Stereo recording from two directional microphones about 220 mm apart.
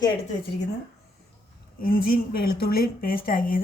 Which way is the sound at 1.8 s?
40° left (ahead or behind).